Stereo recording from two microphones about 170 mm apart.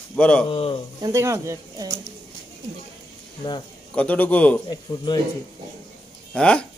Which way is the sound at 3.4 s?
25° left (ahead or behind).